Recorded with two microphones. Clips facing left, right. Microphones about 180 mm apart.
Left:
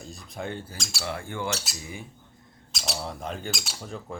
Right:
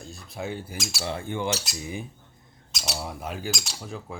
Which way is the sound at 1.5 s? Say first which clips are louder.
Right 3 dB; centre (ahead or behind).